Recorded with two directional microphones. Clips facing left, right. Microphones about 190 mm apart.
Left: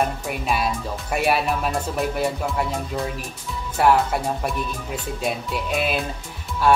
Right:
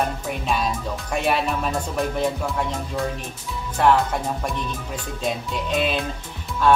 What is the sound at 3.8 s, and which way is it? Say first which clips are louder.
Speech: left 1 dB; 10° left (ahead or behind).